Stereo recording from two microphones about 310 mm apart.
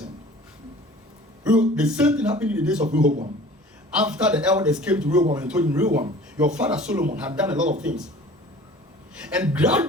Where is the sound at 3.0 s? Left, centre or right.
Right.